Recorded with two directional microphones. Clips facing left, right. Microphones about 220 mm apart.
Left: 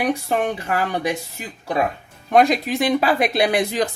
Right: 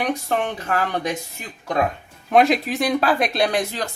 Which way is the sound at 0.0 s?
10° left (ahead or behind).